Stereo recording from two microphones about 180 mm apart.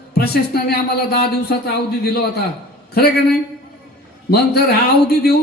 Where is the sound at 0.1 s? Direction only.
60° left (ahead or behind).